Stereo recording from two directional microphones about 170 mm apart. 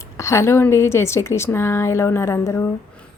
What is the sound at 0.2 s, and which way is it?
Speech, 15° left (ahead or behind).